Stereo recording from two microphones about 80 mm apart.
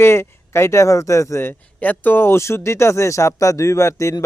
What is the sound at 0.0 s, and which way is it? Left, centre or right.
A man's voice, left.